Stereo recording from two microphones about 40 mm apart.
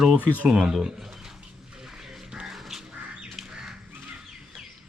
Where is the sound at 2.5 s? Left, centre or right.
Centre.